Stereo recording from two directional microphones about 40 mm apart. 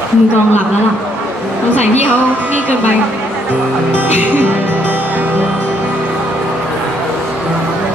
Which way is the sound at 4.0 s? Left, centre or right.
Right.